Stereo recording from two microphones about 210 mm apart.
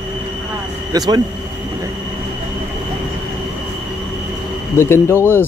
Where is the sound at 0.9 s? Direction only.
20° right (ahead or behind).